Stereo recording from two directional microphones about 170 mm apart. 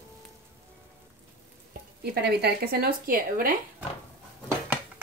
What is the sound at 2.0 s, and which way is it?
A woman's voice, 75° right (ahead or behind).